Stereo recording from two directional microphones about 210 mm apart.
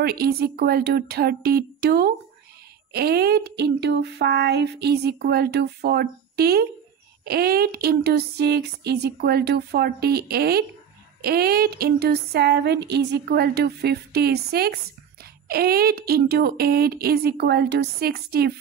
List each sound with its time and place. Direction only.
0.0 s speech: 50° right (ahead or behind)